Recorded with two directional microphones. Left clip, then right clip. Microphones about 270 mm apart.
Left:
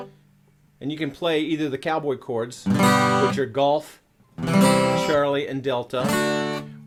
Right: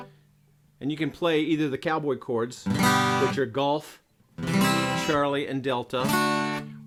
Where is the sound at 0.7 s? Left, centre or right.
Right.